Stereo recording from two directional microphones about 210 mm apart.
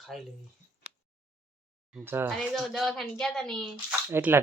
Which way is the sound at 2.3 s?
Centre (ahead or behind).